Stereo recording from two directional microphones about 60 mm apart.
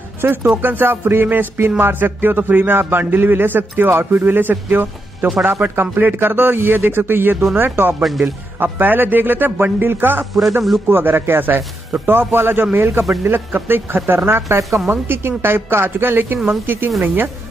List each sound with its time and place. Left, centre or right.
0.2 s a man's voice: right
8.0 s speech: centre
8.6 s a man's voice: right